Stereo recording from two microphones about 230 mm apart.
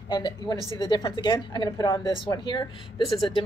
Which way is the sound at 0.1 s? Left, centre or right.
Centre.